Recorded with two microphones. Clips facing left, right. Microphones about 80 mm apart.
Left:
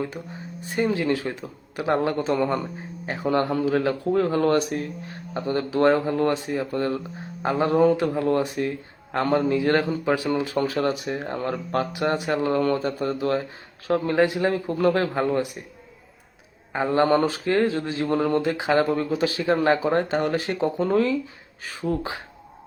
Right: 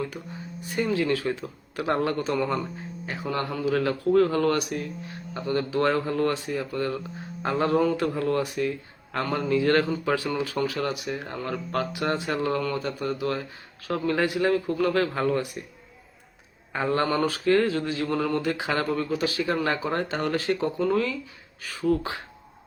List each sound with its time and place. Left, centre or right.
0.8 s speech: left
9.5 s speech: left
16.7 s speech: left